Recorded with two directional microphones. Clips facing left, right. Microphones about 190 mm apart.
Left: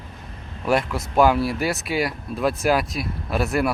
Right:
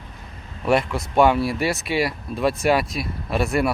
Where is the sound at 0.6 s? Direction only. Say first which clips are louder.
Right 1 dB; centre (ahead or behind).